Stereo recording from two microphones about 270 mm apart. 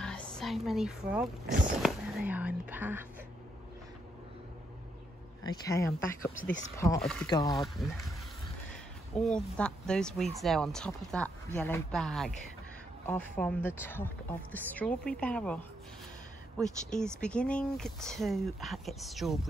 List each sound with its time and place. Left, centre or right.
0.0 s speech: centre
1.4 s speech: right
1.8 s speech: centre
5.4 s speech: centre
7.2 s speech: centre
9.1 s speech: centre